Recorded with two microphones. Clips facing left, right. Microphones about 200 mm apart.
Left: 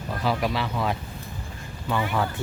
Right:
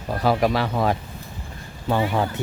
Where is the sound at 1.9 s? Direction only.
35° right (ahead or behind).